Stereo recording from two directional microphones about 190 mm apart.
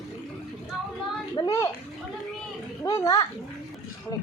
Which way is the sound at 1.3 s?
20° left (ahead or behind).